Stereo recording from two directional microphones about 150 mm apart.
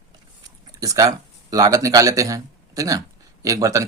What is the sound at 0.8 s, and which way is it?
Speech, 25° right (ahead or behind).